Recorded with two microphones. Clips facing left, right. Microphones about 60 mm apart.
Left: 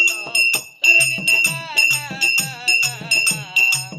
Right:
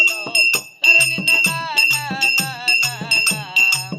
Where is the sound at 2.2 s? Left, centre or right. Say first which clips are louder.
Left 1 dB; right.